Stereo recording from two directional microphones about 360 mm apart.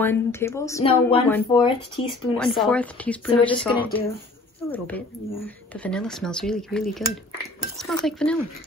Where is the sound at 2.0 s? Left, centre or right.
Left.